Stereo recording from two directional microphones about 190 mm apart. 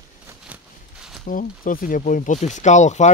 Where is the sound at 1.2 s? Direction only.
45° left (ahead or behind).